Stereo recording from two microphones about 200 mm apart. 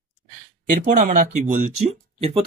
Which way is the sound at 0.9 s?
45° right (ahead or behind).